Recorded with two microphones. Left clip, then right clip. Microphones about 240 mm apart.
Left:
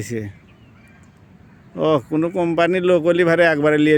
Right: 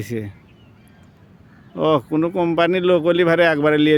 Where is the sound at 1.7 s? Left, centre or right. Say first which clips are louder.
Even; centre.